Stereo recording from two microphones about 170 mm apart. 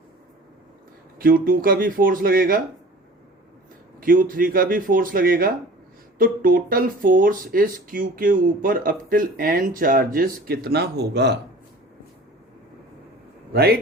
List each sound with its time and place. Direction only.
1.2 s speech: 55° right (ahead or behind)
4.0 s speech: 55° right (ahead or behind); by 11.3 s 85° right
13.5 s speech: 65° right (ahead or behind)